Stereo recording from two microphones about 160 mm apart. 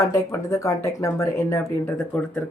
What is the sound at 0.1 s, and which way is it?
Speech, 20° left (ahead or behind).